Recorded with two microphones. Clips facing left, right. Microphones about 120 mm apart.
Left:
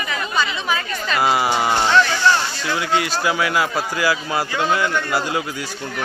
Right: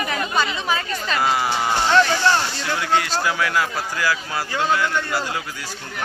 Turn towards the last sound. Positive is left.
turn(degrees=20)  # may be behind; listen again after turning